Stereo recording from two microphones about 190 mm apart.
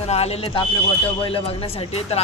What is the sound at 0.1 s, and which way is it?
Speech, 35° left (ahead or behind).